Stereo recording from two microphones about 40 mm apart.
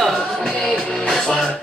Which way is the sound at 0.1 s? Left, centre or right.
Centre.